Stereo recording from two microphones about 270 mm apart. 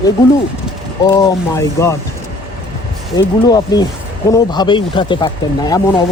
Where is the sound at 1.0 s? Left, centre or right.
Centre.